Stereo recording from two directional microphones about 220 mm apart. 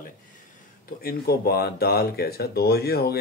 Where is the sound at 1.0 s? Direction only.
45° left (ahead or behind).